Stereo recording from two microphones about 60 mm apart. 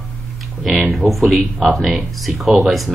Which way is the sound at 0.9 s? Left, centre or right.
Centre.